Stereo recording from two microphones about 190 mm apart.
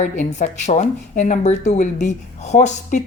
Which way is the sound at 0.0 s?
40° left (ahead or behind).